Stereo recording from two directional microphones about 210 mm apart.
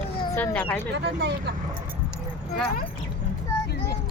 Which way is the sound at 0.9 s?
55° right (ahead or behind).